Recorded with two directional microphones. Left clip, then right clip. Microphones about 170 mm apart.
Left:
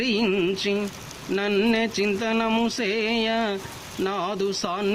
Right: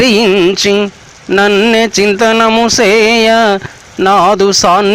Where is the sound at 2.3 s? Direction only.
30° right (ahead or behind).